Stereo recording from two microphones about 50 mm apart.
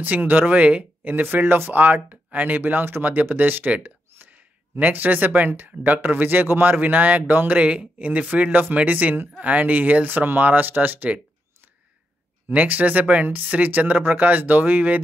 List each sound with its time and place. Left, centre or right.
0.0 s speech: right
7.5 s speech: right
12.5 s speech: right